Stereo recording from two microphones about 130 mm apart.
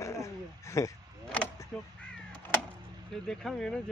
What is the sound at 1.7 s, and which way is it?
Speech, 10° left (ahead or behind).